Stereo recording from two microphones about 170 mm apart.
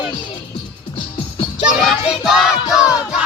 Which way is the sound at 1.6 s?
5° right (ahead or behind).